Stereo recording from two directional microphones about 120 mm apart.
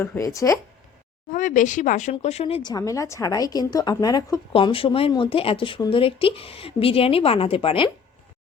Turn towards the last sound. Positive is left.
turn(degrees=45)  # may be behind; listen again after turning